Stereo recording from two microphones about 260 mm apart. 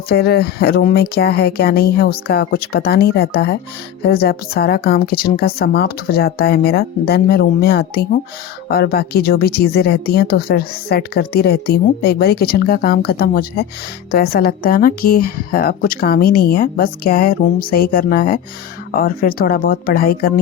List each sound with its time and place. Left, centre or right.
0.1 s speech: left